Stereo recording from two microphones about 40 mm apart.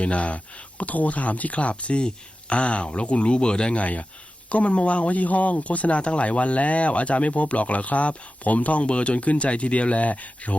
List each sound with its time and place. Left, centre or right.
0.0 s speech: left
3.8 s speech: left